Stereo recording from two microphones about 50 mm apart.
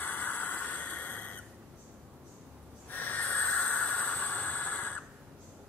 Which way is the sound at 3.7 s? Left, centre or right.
Left.